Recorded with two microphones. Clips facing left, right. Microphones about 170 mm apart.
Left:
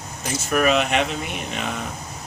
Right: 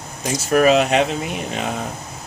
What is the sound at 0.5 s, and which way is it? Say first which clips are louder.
Speech: right 5 dB; 35° right (ahead or behind).